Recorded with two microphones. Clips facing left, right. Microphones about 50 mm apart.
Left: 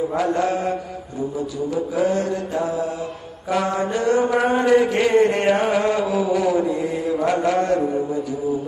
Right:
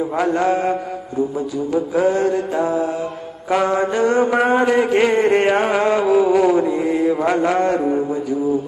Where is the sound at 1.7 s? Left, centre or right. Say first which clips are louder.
Right 4 dB; right.